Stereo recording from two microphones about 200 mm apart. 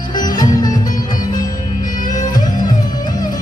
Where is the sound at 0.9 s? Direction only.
40° left (ahead or behind).